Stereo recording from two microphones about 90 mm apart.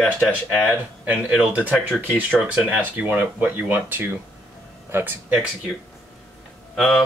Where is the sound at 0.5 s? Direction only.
15° right (ahead or behind).